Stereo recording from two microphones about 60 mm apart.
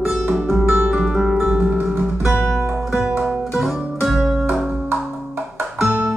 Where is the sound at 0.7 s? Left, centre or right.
Right.